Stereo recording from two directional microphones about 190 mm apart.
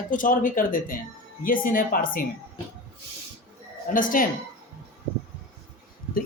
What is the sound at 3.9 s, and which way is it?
Speech, 45° left (ahead or behind).